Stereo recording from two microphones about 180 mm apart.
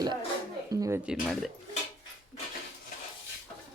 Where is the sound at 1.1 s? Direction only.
Centre (ahead or behind).